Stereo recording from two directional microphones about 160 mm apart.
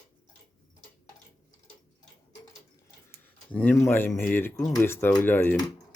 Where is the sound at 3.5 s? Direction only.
10° left (ahead or behind).